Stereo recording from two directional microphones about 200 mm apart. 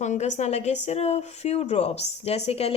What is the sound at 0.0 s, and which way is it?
A woman's voice, 35° left (ahead or behind).